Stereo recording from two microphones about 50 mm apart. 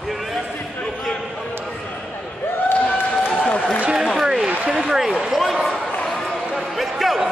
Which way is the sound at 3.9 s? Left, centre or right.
Centre.